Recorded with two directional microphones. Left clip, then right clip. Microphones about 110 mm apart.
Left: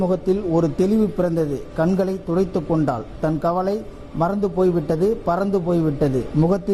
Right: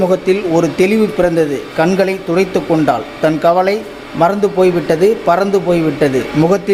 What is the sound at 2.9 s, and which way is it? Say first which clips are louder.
Speech: right 10 dB; 15° right (ahead or behind).